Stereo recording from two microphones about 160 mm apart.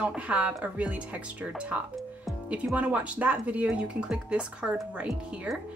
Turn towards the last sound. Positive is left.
turn(degrees=-5)  # may be behind; listen again after turning